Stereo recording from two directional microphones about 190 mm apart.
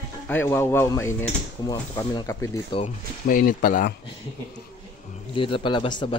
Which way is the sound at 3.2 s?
50° left (ahead or behind).